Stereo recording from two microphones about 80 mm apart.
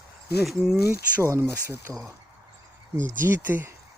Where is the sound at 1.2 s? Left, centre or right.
Right.